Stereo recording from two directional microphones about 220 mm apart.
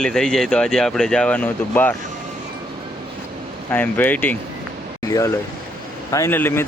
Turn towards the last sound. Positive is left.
turn(degrees=10)  # may be behind; listen again after turning